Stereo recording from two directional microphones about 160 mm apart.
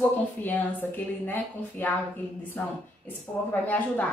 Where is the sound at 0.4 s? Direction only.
10° left (ahead or behind).